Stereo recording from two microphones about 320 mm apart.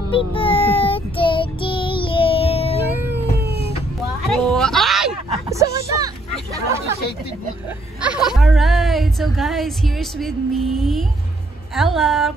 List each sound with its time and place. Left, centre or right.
0.3 s child singing: centre
2.9 s cat: centre
4.3 s a sound: centre
5.9 s hubbub: centre
8.0 s speech: centre